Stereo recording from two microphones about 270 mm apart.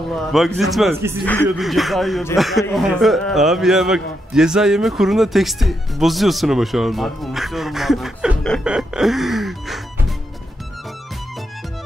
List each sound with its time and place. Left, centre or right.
0.1 s speech: centre